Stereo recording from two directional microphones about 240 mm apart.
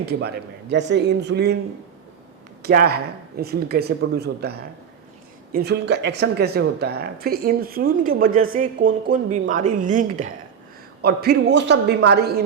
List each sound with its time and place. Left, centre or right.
0.0 s speech: right
2.6 s speech: right